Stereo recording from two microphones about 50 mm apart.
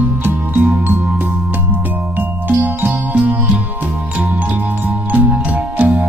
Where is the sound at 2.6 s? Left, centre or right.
Right.